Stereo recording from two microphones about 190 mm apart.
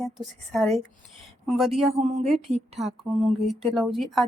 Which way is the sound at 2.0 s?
35° right (ahead or behind).